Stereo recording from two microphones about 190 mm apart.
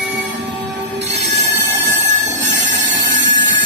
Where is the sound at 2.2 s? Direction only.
65° right (ahead or behind).